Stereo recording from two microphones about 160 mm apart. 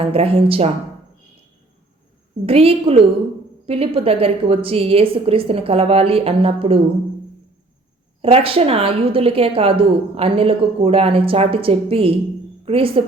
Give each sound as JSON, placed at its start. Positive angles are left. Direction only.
{"t": 0.0, "sound": "a woman's voice", "side_deg": -40}
{"t": 2.5, "sound": "a woman's voice", "side_deg": -35}
{"t": 8.2, "sound": "a woman's voice", "side_deg": -35}